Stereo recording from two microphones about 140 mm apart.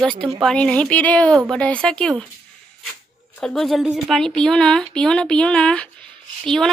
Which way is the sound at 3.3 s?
5° left (ahead or behind).